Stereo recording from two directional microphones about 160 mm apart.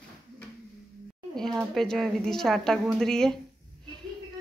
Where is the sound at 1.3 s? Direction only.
5° left (ahead or behind).